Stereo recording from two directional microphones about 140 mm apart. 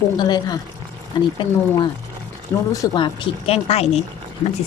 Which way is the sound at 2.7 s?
30° left (ahead or behind).